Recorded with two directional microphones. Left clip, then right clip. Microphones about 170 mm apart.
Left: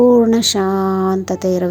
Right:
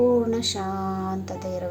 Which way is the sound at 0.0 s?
50° left (ahead or behind).